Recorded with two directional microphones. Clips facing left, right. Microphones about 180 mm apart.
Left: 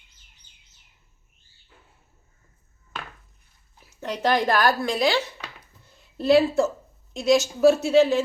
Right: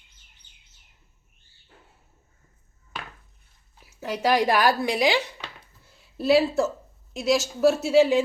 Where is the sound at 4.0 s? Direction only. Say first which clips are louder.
Right 1 dB; 5° right (ahead or behind).